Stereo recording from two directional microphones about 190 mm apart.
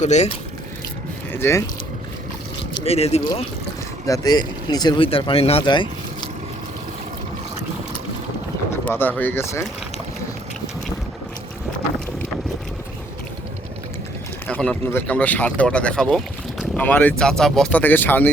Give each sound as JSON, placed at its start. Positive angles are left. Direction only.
{"t": 0.0, "sound": "speech", "side_deg": 35}
{"t": 1.3, "sound": "speech", "side_deg": 10}
{"t": 2.7, "sound": "speech", "side_deg": 30}
{"t": 4.0, "sound": "speech", "side_deg": 20}
{"t": 8.8, "sound": "speech", "side_deg": 10}
{"t": 14.4, "sound": "speech", "side_deg": 5}